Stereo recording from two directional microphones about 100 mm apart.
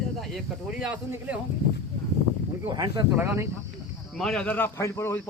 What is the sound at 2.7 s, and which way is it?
Speech, 40° right (ahead or behind).